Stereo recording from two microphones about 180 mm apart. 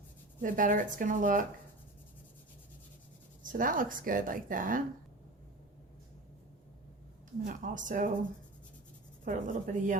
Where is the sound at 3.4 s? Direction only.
50° right (ahead or behind).